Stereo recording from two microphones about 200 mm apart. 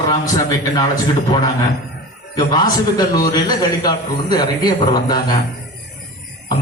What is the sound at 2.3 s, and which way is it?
A man's voice, 20° left (ahead or behind).